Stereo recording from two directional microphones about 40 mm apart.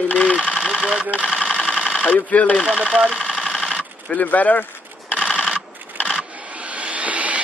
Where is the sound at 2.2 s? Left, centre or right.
Left.